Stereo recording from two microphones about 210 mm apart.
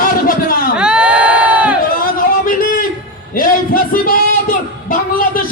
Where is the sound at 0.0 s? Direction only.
40° left (ahead or behind).